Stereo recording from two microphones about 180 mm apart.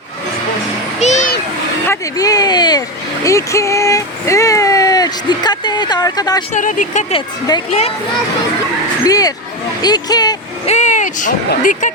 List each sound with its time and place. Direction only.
0.9 s a sound: 40° left (ahead or behind)
1.9 s a sound: 20° left (ahead or behind)
3.2 s speech: 15° left (ahead or behind)
6.5 s speech: 45° left (ahead or behind)
7.1 s speech: 25° left (ahead or behind)
7.7 s a child's voice: 35° left (ahead or behind)
9.0 s speech: 20° left (ahead or behind)
10.7 s speech: 40° left (ahead or behind)